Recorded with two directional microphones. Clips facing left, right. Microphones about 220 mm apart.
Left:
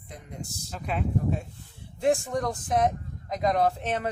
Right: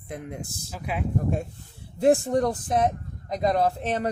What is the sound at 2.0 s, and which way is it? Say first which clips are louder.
Speech: right 5 dB; 35° right (ahead or behind).